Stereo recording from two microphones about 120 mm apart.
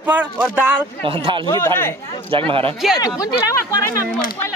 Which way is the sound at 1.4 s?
25° left (ahead or behind).